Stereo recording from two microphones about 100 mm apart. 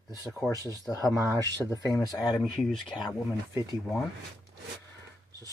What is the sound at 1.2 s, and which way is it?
Speech, 40° right (ahead or behind).